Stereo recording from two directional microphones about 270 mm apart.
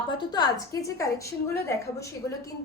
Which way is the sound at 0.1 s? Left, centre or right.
Centre.